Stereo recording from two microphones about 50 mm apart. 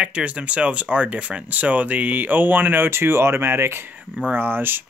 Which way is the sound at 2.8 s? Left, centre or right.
Right.